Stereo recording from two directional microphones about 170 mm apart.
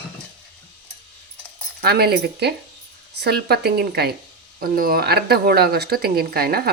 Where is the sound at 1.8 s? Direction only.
70° right (ahead or behind).